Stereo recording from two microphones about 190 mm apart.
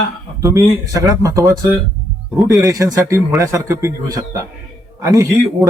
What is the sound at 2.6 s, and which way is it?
A man's voice, 15° right (ahead or behind).